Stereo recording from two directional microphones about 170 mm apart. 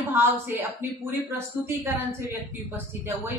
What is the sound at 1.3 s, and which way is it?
Speech, 10° right (ahead or behind).